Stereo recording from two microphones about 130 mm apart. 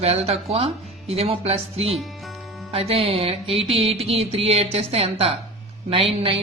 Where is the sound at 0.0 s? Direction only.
50° right (ahead or behind).